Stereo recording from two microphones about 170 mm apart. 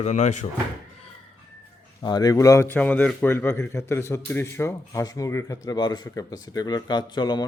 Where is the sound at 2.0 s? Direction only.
25° left (ahead or behind).